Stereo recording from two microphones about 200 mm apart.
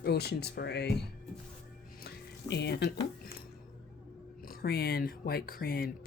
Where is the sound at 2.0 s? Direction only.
55° left (ahead or behind).